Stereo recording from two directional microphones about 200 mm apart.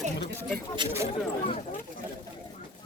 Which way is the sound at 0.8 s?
20° right (ahead or behind).